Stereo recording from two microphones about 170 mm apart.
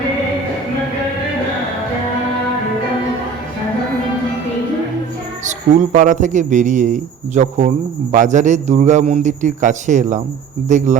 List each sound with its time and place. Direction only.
5.5 s a man's voice: 45° right (ahead or behind)